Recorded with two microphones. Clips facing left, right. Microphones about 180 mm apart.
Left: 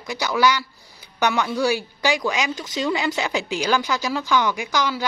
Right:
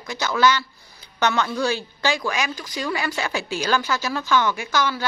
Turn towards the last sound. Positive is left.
turn(degrees=15)  # may be behind; listen again after turning